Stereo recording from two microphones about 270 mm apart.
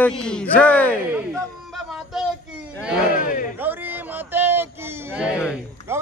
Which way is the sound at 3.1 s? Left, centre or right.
Left.